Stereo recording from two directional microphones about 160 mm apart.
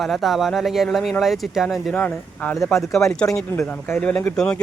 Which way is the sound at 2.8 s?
Centre (ahead or behind).